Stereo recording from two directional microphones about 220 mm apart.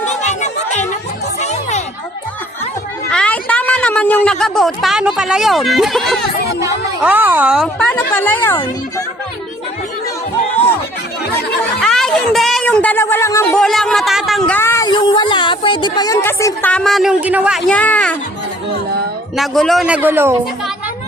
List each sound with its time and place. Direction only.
0.0 s chatter: 30° left (ahead or behind)
1.4 s music: 30° left (ahead or behind)
3.1 s a woman's voice: 5° left (ahead or behind)
11.8 s a sound: centre (ahead or behind)
19.4 s a man's voice: centre (ahead or behind)